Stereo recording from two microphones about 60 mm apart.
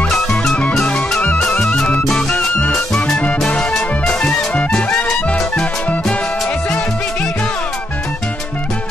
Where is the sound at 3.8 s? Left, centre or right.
Left.